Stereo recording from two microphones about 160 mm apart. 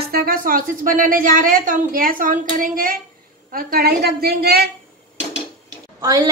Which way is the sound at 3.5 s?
75° right (ahead or behind).